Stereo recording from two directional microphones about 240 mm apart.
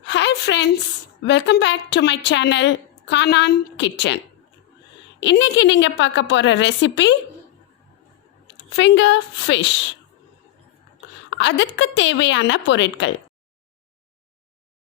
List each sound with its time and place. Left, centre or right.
0.0 s a sound: left
1.2 s a woman's voice: left
5.2 s a woman's voice: left
8.4 s a woman's voice: left
11.3 s a woman's voice: left